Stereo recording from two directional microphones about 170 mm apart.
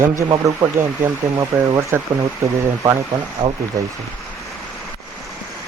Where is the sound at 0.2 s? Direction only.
20° right (ahead or behind).